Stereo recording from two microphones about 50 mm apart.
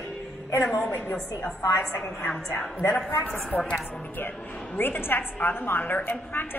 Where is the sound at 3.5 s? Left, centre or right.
Left.